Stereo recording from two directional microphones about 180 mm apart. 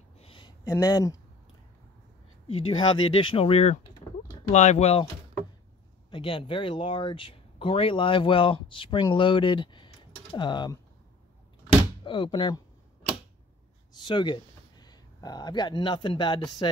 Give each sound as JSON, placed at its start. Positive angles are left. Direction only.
{"t": 0.2, "sound": "a sound", "side_deg": 30}
{"t": 0.7, "sound": "speech", "side_deg": 20}
{"t": 2.4, "sound": "speech", "side_deg": 30}
{"t": 4.0, "sound": "a sound", "side_deg": 20}
{"t": 4.5, "sound": "speech", "side_deg": 40}
{"t": 6.0, "sound": "speech", "side_deg": 30}
{"t": 12.0, "sound": "speech", "side_deg": 25}
{"t": 13.9, "sound": "speech", "side_deg": 25}